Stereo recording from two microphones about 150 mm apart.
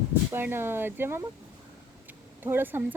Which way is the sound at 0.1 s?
15° right (ahead or behind).